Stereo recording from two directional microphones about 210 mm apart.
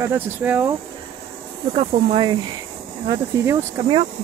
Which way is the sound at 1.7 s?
30° right (ahead or behind).